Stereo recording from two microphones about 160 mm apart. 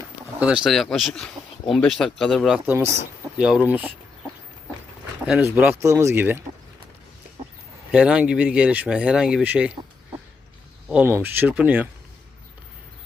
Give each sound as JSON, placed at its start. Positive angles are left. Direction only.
{"t": 0.3, "sound": "speech", "side_deg": -5}
{"t": 2.6, "sound": "speech", "side_deg": -15}
{"t": 5.2, "sound": "speech", "side_deg": -5}
{"t": 7.9, "sound": "speech", "side_deg": -5}
{"t": 10.8, "sound": "speech", "side_deg": -10}